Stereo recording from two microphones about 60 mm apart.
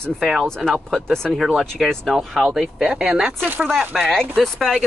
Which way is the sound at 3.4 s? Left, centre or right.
Right.